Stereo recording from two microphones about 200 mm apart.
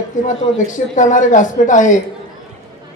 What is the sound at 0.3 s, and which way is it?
Speech, 40° left (ahead or behind).